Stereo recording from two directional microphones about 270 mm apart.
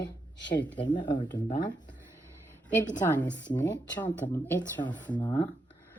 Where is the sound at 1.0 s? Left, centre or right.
Centre.